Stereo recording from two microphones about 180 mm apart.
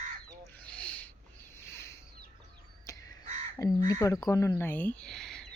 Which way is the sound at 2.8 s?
20° left (ahead or behind).